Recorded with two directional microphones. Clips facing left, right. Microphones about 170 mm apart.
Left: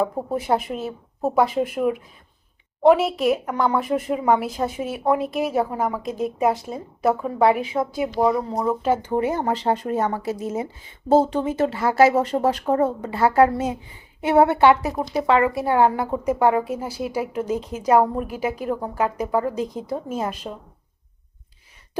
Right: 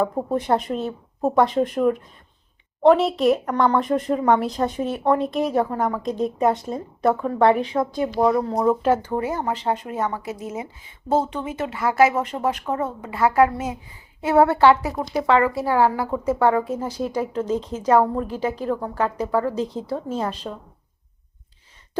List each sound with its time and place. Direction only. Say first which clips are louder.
0.0 s speech: right 1 dB; 5° left (ahead or behind)
9.0 s a woman's voice: left 2 dB; 25° left (ahead or behind)